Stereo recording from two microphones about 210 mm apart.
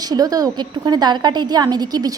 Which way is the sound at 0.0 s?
20° right (ahead or behind).